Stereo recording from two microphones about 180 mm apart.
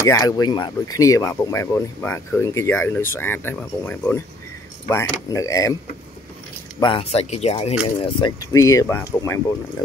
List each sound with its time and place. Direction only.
0.0 s speech: 20° left (ahead or behind)
6.8 s speech: 30° left (ahead or behind)
8.2 s speech: 20° left (ahead or behind)